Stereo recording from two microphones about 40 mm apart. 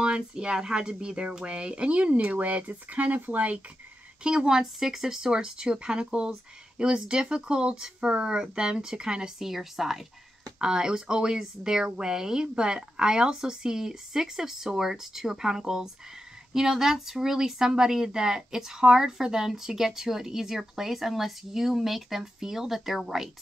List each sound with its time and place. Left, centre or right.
0.0 s speech: right
4.2 s speech: right
9.4 s a woman's voice: centre
10.6 s speech: centre